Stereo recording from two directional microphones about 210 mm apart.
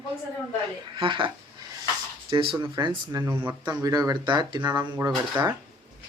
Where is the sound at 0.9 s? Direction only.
20° right (ahead or behind).